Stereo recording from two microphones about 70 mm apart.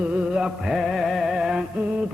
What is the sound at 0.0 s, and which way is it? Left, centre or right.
Music, centre.